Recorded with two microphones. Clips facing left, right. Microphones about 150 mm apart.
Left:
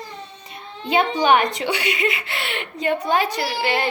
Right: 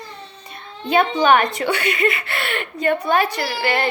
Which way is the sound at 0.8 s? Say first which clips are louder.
Right 2 dB; 15° left (ahead or behind).